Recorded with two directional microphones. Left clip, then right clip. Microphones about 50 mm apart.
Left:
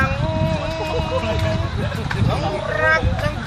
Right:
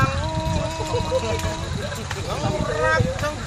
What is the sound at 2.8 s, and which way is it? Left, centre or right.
Speech, right.